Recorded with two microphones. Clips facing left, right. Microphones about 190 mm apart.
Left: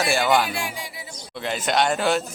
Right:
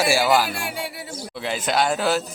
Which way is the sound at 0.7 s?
65° right (ahead or behind).